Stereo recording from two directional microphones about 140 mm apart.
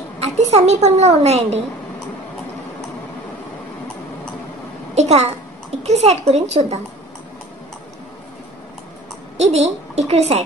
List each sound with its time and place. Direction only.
0.2 s a woman's voice: 50° right (ahead or behind)
4.9 s a woman's voice: 50° right (ahead or behind)
9.4 s a woman's voice: 50° right (ahead or behind)